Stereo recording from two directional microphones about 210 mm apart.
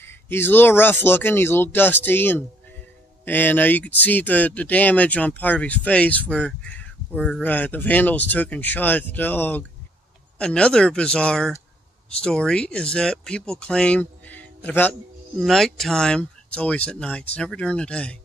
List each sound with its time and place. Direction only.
0.0 s speech: 10° left (ahead or behind)